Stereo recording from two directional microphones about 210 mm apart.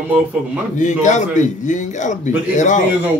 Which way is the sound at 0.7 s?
35° left (ahead or behind).